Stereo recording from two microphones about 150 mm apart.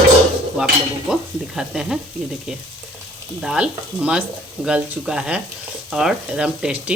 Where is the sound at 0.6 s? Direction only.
5° right (ahead or behind).